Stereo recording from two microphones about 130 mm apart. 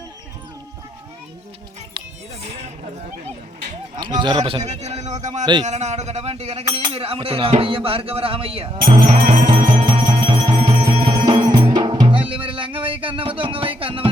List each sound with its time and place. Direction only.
4.0 s speech: 35° right (ahead or behind)
4.6 s a man's voice: 60° right (ahead or behind)
9.5 s music: 40° right (ahead or behind)